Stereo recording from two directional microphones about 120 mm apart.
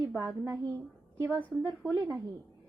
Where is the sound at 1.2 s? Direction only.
15° right (ahead or behind).